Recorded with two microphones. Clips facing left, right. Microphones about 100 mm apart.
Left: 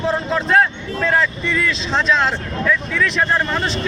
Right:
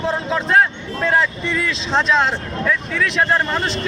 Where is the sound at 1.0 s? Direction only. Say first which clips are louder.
Even; 25° right (ahead or behind).